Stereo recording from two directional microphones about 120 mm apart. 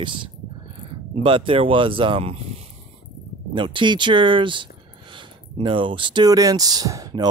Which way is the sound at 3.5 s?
45° right (ahead or behind).